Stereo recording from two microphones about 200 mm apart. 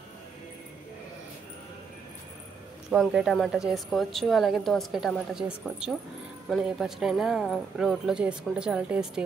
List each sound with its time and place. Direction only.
2.9 s a woman's voice: centre (ahead or behind)